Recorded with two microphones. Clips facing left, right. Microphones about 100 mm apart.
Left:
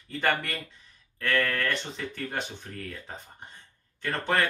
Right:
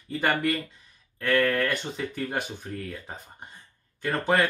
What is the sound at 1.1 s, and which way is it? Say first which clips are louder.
Speech: right 4 dB; 5° right (ahead or behind).